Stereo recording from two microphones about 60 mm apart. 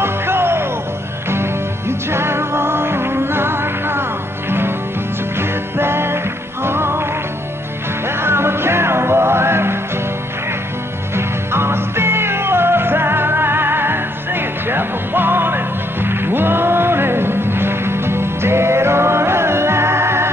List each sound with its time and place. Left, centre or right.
0.0 s music: right
5.8 s music: right
8.2 s music: right
11.1 s music: right